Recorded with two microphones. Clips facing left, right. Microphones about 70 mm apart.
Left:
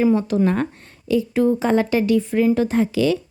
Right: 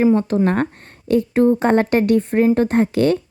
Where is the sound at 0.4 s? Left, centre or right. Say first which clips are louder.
Right 2 dB; right.